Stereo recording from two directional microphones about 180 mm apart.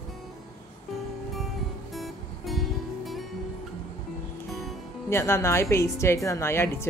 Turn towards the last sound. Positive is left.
turn(degrees=15)  # may be behind; listen again after turning